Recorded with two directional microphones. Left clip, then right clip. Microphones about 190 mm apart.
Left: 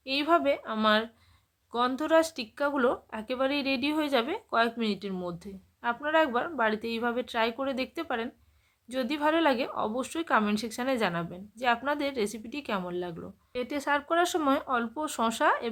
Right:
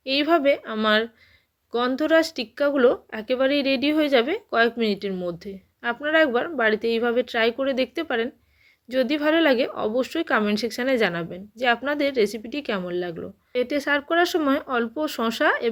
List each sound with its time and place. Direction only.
0.0 s speech: 10° right (ahead or behind)